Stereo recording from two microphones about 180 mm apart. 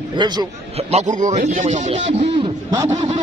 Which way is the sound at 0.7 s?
35° right (ahead or behind).